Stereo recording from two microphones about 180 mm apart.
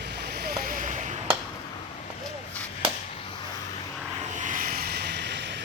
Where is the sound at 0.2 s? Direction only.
65° right (ahead or behind).